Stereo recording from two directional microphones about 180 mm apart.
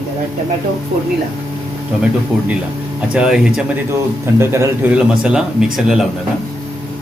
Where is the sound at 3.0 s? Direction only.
5° right (ahead or behind).